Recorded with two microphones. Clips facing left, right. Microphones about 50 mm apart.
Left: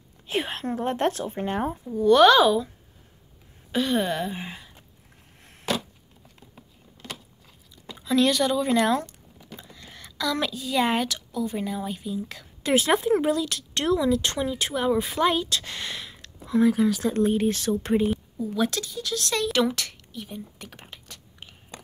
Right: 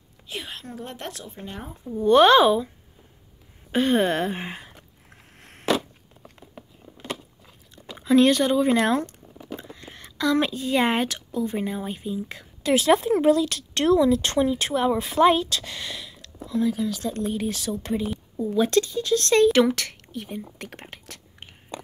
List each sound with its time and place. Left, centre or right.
0.3 s a woman's voice: left
2.0 s speech: right
3.7 s a sound: right
7.9 s speech: right
12.6 s speech: centre
16.4 s speech: left
17.0 s speech: left
18.6 s speech: right
20.5 s whispering: right